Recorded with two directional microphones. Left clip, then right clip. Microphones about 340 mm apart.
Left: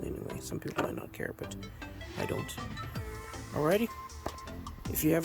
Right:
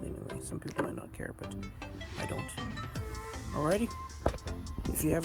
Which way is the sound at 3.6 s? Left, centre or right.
Centre.